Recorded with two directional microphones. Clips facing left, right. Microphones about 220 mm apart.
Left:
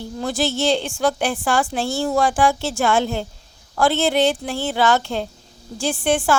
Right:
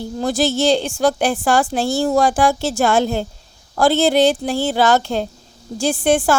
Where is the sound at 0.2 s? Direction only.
40° right (ahead or behind).